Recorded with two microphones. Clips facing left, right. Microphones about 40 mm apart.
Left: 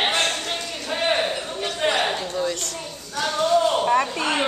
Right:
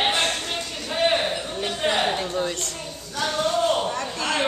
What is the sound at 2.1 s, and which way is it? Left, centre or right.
Speech, right.